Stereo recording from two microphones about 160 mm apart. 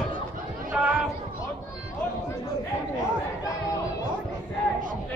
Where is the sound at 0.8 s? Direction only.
5° right (ahead or behind).